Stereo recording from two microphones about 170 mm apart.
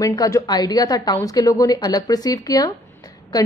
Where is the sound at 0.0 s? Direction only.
20° left (ahead or behind).